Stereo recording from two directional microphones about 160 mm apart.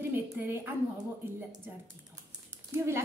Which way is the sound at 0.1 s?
15° right (ahead or behind).